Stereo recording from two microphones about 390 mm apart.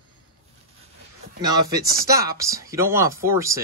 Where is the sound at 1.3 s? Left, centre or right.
Centre.